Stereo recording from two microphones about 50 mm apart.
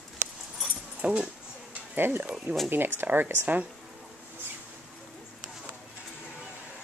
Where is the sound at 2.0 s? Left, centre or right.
Right.